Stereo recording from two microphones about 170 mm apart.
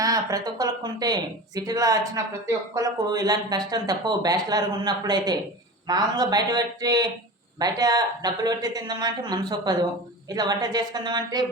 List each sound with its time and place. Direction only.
0.0 s speech: 20° right (ahead or behind)